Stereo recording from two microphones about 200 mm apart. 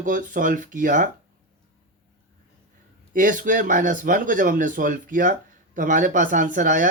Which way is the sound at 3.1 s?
40° right (ahead or behind).